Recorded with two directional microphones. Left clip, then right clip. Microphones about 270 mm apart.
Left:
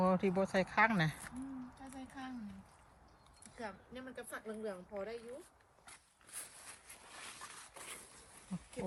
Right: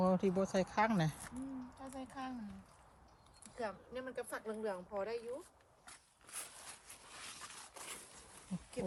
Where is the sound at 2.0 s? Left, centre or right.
Right.